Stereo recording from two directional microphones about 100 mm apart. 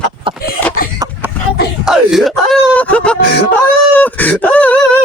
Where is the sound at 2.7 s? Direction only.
15° left (ahead or behind).